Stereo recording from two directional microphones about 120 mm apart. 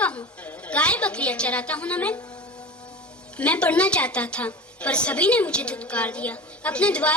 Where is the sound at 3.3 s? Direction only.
10° left (ahead or behind).